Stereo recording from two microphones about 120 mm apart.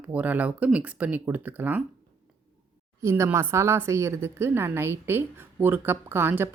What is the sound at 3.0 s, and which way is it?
A woman's voice, 20° right (ahead or behind).